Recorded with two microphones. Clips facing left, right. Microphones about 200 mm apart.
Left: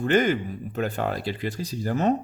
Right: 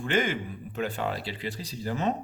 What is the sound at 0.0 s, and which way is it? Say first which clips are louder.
Speech: left 6 dB; 40° left (ahead or behind).